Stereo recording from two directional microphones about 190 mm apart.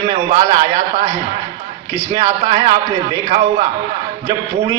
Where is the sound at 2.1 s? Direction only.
20° right (ahead or behind).